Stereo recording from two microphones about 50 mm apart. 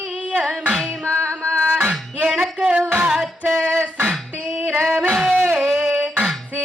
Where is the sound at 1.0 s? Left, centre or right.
Right.